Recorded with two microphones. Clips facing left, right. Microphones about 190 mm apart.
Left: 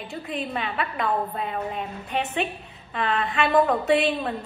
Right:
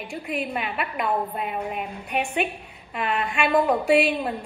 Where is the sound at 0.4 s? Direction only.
10° right (ahead or behind).